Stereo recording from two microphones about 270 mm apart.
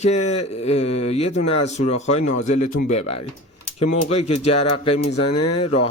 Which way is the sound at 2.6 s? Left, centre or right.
Left.